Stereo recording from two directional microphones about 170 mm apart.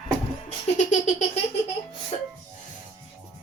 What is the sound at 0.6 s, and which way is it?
Laughter, 45° left (ahead or behind).